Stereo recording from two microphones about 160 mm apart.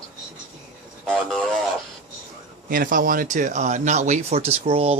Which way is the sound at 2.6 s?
60° right (ahead or behind).